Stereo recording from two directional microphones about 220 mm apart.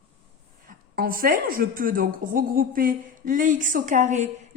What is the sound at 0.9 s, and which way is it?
A woman's voice, 40° right (ahead or behind).